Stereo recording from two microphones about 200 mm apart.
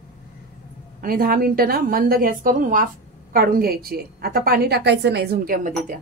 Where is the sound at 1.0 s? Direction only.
45° right (ahead or behind).